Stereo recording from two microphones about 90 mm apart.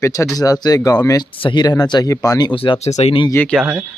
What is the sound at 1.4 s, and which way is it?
Speech, 60° left (ahead or behind).